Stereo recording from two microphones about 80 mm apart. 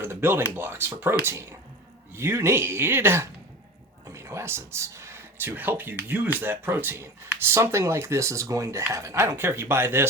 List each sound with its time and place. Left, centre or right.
0.0 s speech: right